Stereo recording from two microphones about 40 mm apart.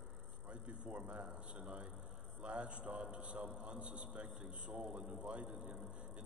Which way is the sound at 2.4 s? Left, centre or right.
Right.